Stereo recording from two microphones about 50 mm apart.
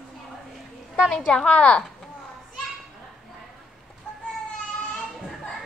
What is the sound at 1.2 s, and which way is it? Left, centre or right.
Speech, left.